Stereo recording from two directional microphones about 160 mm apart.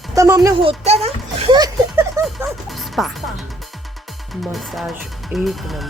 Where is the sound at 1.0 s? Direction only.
40° right (ahead or behind).